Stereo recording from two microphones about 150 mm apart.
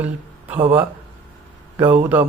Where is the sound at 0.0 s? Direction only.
10° right (ahead or behind).